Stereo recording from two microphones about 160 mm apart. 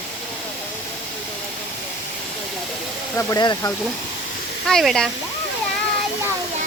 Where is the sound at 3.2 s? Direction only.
20° left (ahead or behind).